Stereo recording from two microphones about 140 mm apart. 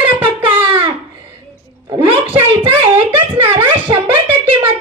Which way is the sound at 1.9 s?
40° right (ahead or behind).